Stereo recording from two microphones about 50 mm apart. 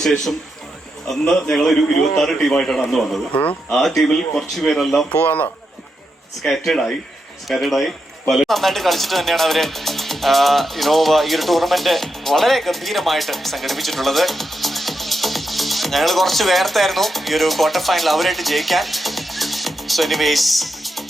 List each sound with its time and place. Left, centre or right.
1.5 s a man's voice: centre
5.1 s a man's voice: left
6.5 s a man's voice: centre